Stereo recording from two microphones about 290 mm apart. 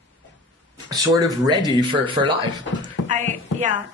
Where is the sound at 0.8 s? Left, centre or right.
Centre.